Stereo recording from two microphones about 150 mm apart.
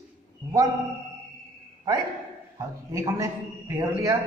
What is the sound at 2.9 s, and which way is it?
A man's voice, 20° right (ahead or behind).